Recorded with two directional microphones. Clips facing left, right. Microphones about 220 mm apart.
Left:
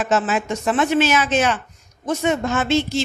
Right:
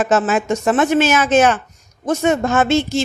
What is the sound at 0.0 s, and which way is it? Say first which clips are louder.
Speech: right 4 dB; 45° right (ahead or behind).